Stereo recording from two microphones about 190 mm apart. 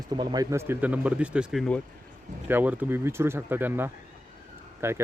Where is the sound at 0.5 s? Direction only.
10° right (ahead or behind).